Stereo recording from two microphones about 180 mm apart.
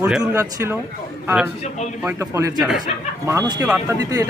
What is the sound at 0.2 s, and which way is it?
Speech, 15° right (ahead or behind).